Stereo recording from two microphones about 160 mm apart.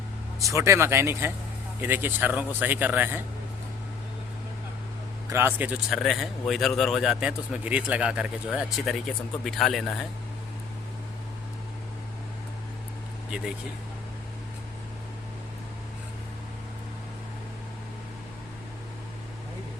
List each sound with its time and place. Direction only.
0.3 s speech: 20° right (ahead or behind)
5.3 s a man's voice: 15° right (ahead or behind); by 10.1 s centre (ahead or behind)